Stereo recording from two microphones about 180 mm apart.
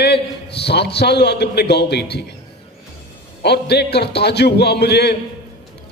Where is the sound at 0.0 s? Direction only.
70° left (ahead or behind).